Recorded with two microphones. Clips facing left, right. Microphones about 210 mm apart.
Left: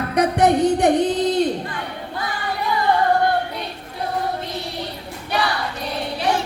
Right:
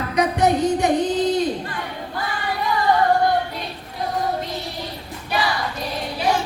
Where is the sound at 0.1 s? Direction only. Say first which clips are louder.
Left 2 dB; 60° left (ahead or behind).